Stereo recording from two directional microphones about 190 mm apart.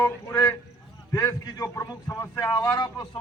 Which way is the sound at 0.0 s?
20° left (ahead or behind).